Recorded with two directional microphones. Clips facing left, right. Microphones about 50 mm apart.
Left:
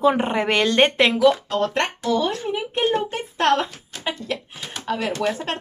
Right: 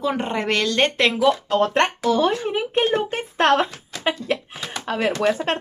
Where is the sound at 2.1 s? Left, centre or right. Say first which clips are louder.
Right 2 dB; right.